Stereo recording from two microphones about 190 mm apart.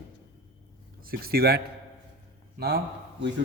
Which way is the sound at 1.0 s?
50° right (ahead or behind).